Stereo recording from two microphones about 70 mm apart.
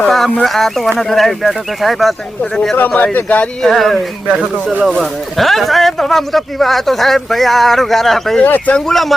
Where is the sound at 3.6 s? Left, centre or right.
Centre.